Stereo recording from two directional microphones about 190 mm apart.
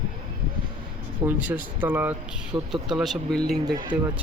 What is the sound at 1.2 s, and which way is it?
Speech, 10° right (ahead or behind).